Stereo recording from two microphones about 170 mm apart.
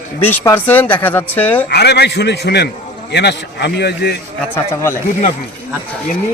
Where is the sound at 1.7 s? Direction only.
75° left (ahead or behind).